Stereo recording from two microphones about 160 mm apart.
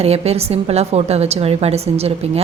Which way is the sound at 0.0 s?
40° right (ahead or behind).